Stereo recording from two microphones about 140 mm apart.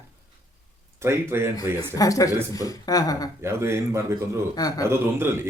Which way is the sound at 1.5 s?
25° left (ahead or behind).